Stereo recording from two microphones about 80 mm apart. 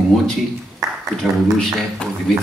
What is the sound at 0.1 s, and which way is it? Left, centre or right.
Speech, centre.